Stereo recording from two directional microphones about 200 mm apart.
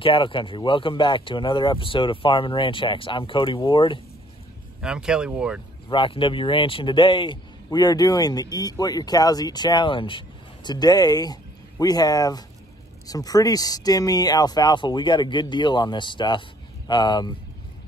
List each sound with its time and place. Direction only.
0.0 s speech: 25° left (ahead or behind)
4.8 s speech: 5° right (ahead or behind)
5.9 s speech: 25° left (ahead or behind)